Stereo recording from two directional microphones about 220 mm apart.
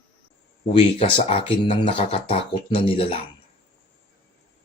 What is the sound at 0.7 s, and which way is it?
Speech, 25° left (ahead or behind).